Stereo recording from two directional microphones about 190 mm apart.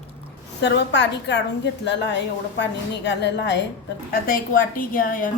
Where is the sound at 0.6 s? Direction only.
65° left (ahead or behind).